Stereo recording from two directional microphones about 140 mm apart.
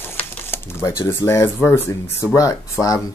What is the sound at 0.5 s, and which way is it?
Speech, 20° left (ahead or behind).